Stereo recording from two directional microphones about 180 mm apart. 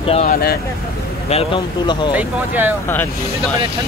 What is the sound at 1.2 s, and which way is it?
Speech, 30° left (ahead or behind).